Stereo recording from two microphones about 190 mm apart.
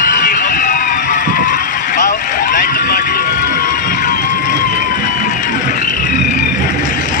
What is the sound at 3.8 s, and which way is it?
Run, 45° left (ahead or behind).